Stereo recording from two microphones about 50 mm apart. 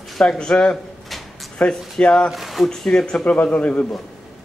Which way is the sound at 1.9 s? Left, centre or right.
Centre.